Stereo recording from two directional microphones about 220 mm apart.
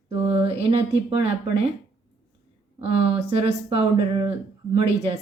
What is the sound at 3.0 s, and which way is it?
Speech, 25° right (ahead or behind).